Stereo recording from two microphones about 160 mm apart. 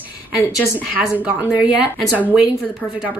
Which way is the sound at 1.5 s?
10° right (ahead or behind).